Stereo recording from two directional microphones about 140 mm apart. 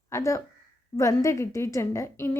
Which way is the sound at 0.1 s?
20° left (ahead or behind).